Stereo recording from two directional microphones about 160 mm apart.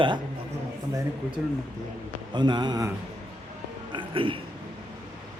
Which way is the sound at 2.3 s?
25° right (ahead or behind).